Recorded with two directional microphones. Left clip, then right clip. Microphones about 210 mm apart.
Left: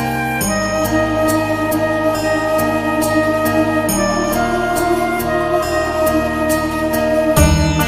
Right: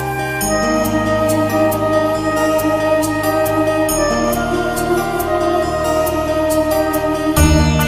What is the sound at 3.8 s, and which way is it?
Music, centre (ahead or behind).